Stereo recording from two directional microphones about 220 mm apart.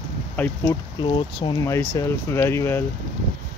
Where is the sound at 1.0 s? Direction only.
20° left (ahead or behind).